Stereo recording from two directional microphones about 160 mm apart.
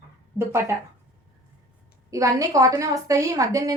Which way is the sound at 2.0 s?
20° right (ahead or behind).